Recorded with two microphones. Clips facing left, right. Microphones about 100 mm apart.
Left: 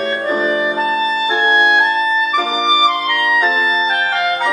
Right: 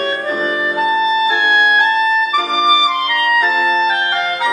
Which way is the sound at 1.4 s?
30° left (ahead or behind).